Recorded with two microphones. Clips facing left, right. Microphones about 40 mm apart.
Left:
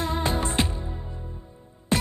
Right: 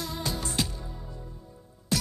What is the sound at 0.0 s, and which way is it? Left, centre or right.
Music, left.